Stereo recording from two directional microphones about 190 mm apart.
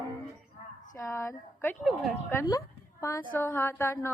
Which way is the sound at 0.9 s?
15° left (ahead or behind).